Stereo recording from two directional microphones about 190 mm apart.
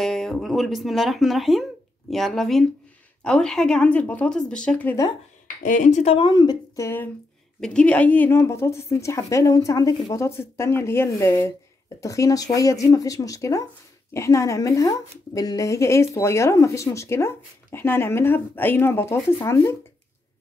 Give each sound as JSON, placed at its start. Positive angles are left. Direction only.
{"t": 0.0, "sound": "speech", "side_deg": 0}
{"t": 5.6, "sound": "a woman's voice", "side_deg": 40}